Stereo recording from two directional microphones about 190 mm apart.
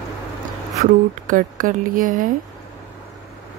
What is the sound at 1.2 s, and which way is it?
Speech, 45° right (ahead or behind).